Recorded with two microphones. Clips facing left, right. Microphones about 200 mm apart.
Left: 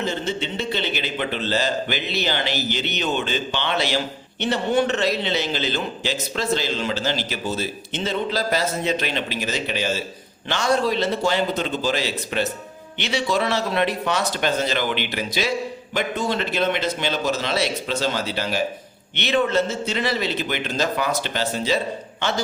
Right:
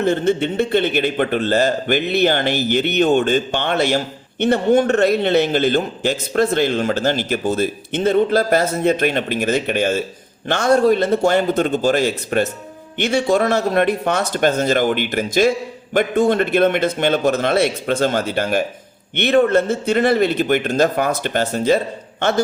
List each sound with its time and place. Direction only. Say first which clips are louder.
0.0 s a man's voice: right 9 dB; 55° right (ahead or behind)